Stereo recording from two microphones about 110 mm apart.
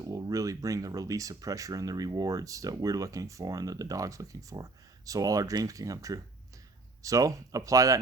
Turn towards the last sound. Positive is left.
turn(degrees=-30)  # may be behind; listen again after turning